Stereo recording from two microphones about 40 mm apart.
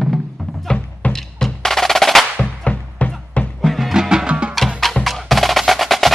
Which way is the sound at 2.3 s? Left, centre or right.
Left.